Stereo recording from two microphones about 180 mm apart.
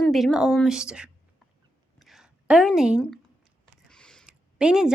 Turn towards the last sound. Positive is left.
turn(degrees=-5)  # may be behind; listen again after turning